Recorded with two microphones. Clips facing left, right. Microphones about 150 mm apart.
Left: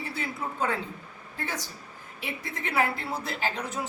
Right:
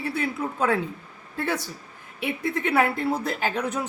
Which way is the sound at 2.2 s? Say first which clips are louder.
Right 9 dB; 60° right (ahead or behind).